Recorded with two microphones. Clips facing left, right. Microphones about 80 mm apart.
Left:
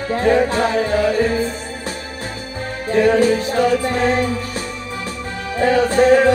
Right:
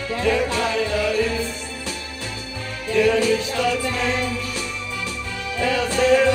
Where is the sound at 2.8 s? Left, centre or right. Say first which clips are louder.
Left 4 dB; left.